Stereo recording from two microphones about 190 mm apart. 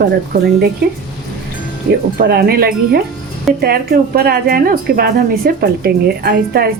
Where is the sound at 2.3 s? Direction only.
55° right (ahead or behind).